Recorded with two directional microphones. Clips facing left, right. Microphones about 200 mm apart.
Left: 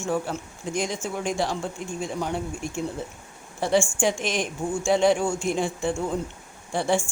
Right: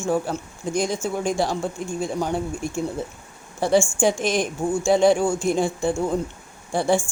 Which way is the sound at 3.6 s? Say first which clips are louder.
Right 3 dB; 40° right (ahead or behind).